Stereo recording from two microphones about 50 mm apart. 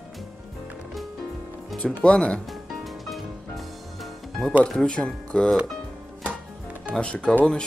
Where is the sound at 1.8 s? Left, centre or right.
Left.